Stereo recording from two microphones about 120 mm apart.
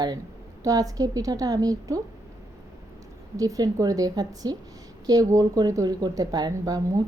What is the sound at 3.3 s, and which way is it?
A woman's voice, 30° right (ahead or behind).